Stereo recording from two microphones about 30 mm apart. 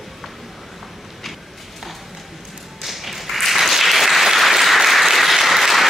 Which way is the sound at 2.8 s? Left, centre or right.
Centre.